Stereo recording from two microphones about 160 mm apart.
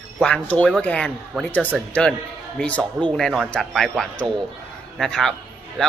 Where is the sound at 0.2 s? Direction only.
5° left (ahead or behind).